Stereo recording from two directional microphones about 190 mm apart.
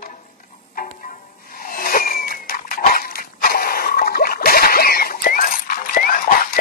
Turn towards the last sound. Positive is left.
turn(degrees=45)  # may be behind; listen again after turning